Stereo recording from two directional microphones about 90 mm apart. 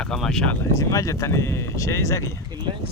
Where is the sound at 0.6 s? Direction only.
40° left (ahead or behind).